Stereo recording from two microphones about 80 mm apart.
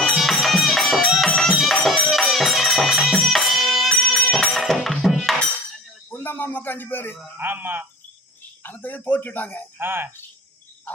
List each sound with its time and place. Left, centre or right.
0.2 s music: centre
6.1 s a sound: left
7.3 s a man's voice: right
8.6 s a man's voice: left
9.7 s a man's voice: right